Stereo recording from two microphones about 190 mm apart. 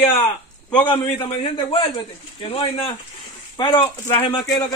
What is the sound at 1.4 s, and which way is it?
A man's voice, 30° left (ahead or behind).